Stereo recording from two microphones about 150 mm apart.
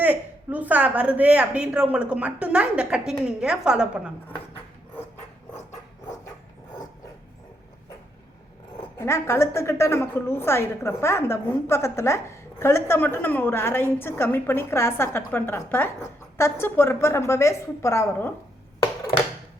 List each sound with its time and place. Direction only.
0.0 s a woman's voice: 10° right (ahead or behind)
9.0 s a woman's voice: 20° left (ahead or behind)